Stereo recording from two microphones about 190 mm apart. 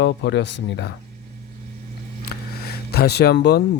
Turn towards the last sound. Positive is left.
turn(degrees=60)  # may be behind; listen again after turning